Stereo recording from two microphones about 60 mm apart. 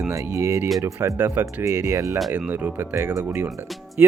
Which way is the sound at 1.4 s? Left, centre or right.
Right.